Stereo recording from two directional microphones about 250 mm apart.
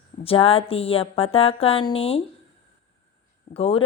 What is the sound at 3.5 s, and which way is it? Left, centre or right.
Speech, left.